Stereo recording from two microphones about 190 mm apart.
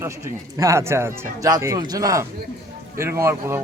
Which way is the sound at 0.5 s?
15° right (ahead or behind).